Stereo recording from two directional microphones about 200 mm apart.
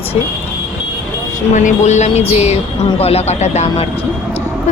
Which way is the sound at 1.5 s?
35° left (ahead or behind).